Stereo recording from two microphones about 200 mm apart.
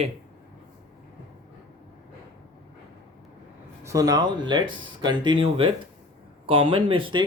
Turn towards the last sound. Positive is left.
turn(degrees=-25)  # may be behind; listen again after turning